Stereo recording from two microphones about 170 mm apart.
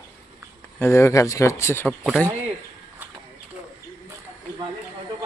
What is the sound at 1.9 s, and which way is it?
Speech, centre (ahead or behind).